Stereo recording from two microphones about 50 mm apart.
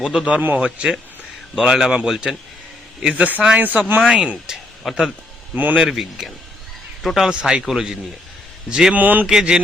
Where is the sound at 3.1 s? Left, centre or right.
Right.